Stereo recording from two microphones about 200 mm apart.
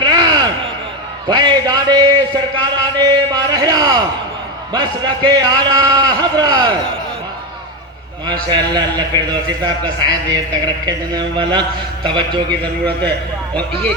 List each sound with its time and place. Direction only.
0.0 s a sound: 20° right (ahead or behind)
1.3 s a man's voice: 20° right (ahead or behind)
8.4 s a man's voice: 20° right (ahead or behind)
12.5 s a man's voice: 5° left (ahead or behind)